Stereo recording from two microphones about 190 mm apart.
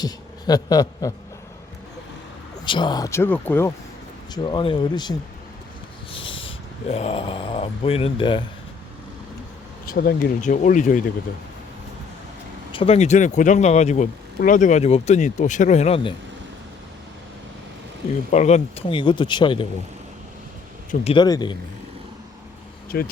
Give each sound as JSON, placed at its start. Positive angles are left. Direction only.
{"t": 0.0, "sound": "a man's voice", "side_deg": 20}
{"t": 2.6, "sound": "speech", "side_deg": 25}
{"t": 4.4, "sound": "speech", "side_deg": 25}
{"t": 6.1, "sound": "a sound", "side_deg": 30}
{"t": 6.9, "sound": "speech", "side_deg": 30}
{"t": 9.9, "sound": "speech", "side_deg": 50}
{"t": 12.7, "sound": "speech", "side_deg": 30}
{"t": 18.3, "sound": "speech", "side_deg": 35}
{"t": 21.0, "sound": "speech", "side_deg": 25}
{"t": 22.9, "sound": "speech", "side_deg": 55}